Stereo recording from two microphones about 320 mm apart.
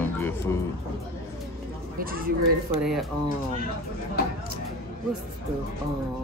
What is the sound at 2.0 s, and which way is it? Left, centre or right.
Speech, right.